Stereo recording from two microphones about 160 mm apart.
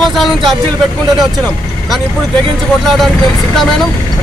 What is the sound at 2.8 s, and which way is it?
Speech, centre (ahead or behind).